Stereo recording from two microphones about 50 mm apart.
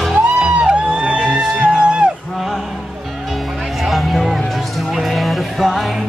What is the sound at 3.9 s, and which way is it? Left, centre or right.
Music, centre.